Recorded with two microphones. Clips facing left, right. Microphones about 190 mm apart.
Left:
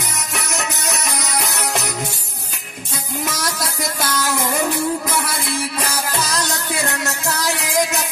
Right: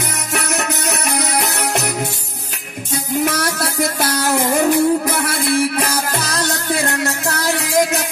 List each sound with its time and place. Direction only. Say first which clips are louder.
0.3 s music: right 6 dB; 60° right (ahead or behind)
3.3 s music: right 5 dB; 60° right (ahead or behind)